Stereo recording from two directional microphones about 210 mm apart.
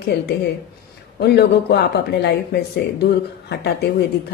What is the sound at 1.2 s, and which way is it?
Speech, 50° left (ahead or behind).